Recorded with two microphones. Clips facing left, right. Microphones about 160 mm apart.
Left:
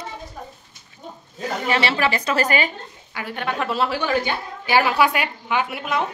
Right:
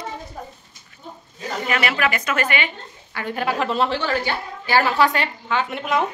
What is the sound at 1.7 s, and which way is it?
A woman's voice, 30° left (ahead or behind).